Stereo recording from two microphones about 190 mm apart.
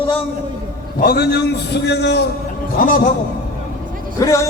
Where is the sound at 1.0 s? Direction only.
55° left (ahead or behind).